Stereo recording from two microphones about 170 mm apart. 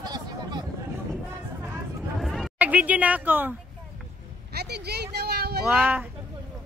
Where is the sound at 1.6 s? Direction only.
5° right (ahead or behind).